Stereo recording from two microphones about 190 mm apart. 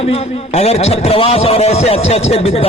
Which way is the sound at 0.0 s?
30° left (ahead or behind).